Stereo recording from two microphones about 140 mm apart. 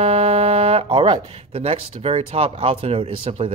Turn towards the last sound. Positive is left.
turn(degrees=-45)  # may be behind; listen again after turning